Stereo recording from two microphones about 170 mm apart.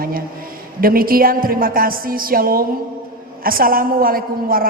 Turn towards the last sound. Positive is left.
turn(degrees=-60)  # may be behind; listen again after turning